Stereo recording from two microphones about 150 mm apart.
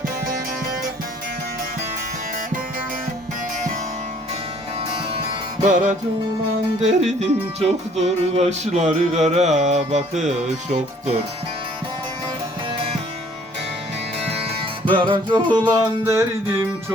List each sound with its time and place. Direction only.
6.8 s music: 50° right (ahead or behind)
12.7 s music: 40° right (ahead or behind)
14.2 s music: 45° right (ahead or behind); by 16.6 s 20° right (ahead or behind)